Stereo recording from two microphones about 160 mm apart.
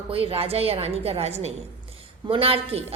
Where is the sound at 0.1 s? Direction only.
35° right (ahead or behind).